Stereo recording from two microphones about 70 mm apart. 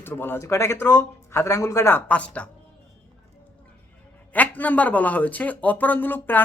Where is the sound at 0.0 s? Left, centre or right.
Left.